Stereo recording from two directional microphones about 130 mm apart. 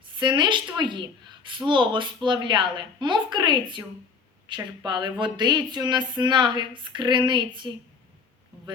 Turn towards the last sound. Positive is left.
turn(degrees=-40)  # may be behind; listen again after turning